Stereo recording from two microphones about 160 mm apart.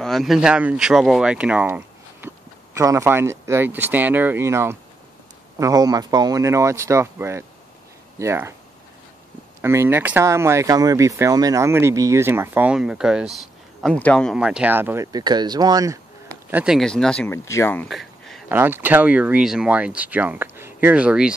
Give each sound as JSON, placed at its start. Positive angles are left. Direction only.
{"t": 0.0, "sound": "speech", "side_deg": 0}
{"t": 2.2, "sound": "speech", "side_deg": -20}
{"t": 9.6, "sound": "speech", "side_deg": -15}
{"t": 14.3, "sound": "speech", "side_deg": -5}
{"t": 15.1, "sound": "speech", "side_deg": -25}
{"t": 16.4, "sound": "speech", "side_deg": -5}
{"t": 17.8, "sound": "a sound", "side_deg": 0}
{"t": 18.5, "sound": "speech", "side_deg": -10}